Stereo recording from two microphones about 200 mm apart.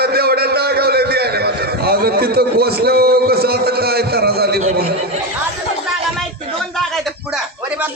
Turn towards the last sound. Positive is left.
turn(degrees=-5)  # may be behind; listen again after turning